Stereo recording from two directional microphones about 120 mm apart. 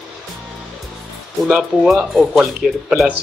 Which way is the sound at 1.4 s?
Centre (ahead or behind).